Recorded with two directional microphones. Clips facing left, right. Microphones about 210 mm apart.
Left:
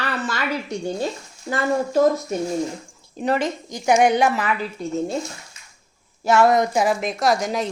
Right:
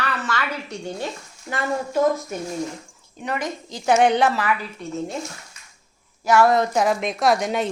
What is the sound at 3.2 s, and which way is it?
Speech, 30° left (ahead or behind).